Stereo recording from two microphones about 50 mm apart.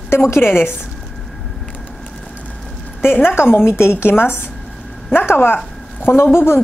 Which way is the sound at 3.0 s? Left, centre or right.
Left.